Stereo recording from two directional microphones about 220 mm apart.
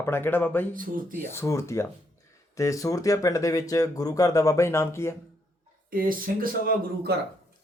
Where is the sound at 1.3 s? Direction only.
10° left (ahead or behind).